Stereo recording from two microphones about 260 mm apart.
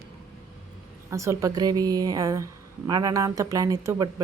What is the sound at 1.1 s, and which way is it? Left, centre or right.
A woman's voice, centre.